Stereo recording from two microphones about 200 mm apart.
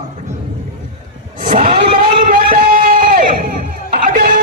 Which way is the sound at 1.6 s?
30° right (ahead or behind).